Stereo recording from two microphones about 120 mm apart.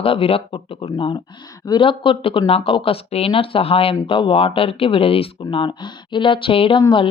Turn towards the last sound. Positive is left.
turn(degrees=40)  # may be behind; listen again after turning